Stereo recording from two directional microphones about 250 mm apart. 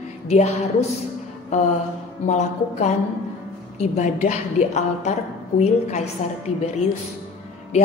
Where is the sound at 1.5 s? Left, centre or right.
Left.